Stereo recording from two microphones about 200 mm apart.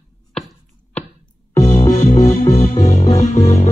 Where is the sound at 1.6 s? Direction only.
35° left (ahead or behind).